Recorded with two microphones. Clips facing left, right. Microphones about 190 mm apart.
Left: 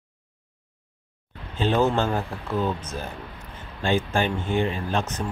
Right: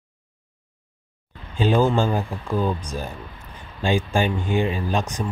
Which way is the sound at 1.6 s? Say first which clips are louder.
Right 3 dB; 10° right (ahead or behind).